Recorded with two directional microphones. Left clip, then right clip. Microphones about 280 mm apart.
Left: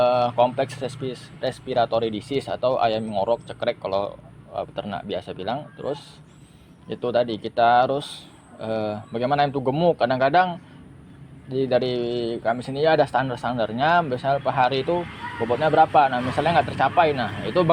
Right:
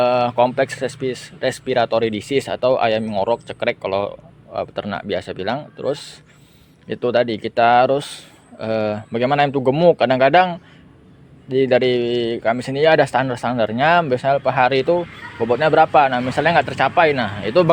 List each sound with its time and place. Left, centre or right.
0.0 s speech: right